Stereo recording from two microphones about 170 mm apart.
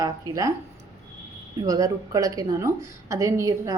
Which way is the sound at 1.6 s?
20° right (ahead or behind).